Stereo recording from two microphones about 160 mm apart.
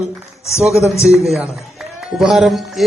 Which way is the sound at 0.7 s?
20° left (ahead or behind).